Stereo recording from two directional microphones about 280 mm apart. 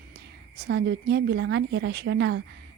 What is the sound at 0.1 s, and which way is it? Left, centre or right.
A woman's voice, right.